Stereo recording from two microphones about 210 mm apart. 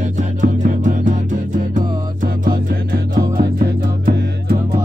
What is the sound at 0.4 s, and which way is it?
Music, 35° right (ahead or behind).